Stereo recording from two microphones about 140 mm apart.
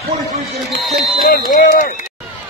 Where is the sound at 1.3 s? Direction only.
70° left (ahead or behind).